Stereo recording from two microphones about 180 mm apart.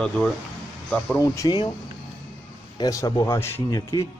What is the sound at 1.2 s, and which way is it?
Speech, 20° left (ahead or behind).